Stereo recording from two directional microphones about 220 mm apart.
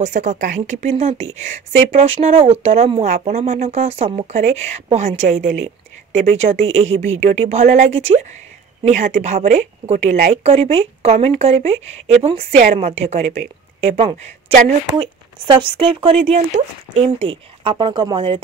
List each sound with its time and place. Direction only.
0.0 s speech: 35° right (ahead or behind)